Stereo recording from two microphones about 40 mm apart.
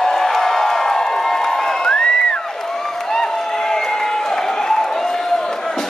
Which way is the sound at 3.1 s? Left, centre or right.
Centre.